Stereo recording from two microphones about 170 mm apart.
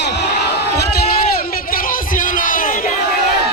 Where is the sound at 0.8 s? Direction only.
65° left (ahead or behind).